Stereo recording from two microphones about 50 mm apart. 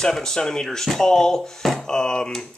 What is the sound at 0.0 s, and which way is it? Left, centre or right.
Speech, centre.